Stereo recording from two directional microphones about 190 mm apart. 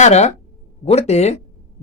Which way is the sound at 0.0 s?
35° left (ahead or behind).